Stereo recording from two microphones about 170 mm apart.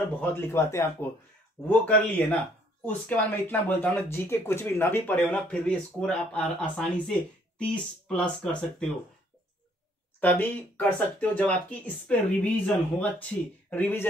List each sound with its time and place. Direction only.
0.2 s speech: 15° left (ahead or behind)
10.2 s speech: 10° left (ahead or behind)